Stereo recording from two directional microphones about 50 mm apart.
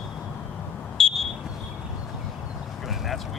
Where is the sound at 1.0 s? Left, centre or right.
Centre.